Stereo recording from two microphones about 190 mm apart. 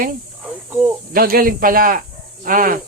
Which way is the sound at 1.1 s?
50° right (ahead or behind).